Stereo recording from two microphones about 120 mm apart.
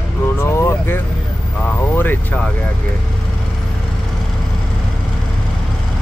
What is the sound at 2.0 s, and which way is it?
Vehicle, 15° left (ahead or behind).